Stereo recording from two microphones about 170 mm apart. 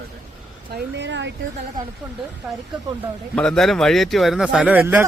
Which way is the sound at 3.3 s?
5° left (ahead or behind).